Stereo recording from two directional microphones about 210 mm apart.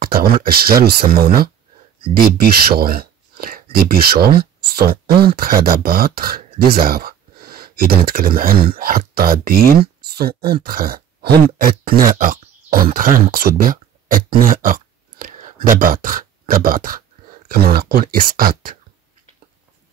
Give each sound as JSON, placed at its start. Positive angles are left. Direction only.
{"t": 0.0, "sound": "speech", "side_deg": -45}
{"t": 2.7, "sound": "speech", "side_deg": -45}